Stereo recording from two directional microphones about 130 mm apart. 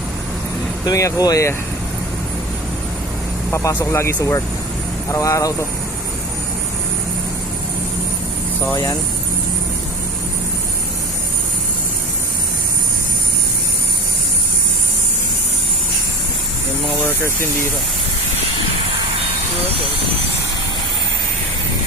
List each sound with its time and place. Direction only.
0.9 s speech: 25° left (ahead or behind)
3.5 s speech: 20° left (ahead or behind)
8.7 s speech: 30° left (ahead or behind)
17.0 s speech: 20° left (ahead or behind)